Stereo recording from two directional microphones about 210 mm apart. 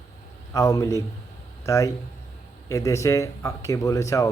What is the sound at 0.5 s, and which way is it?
A man's voice, 15° left (ahead or behind).